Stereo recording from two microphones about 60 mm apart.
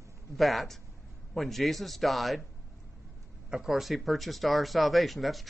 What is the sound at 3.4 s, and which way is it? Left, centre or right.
A man's voice, centre.